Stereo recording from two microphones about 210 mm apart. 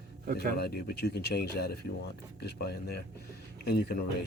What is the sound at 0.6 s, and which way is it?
Speech, 50° left (ahead or behind).